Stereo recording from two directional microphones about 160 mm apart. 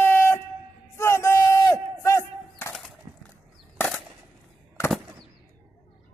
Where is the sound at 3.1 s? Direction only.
15° right (ahead or behind).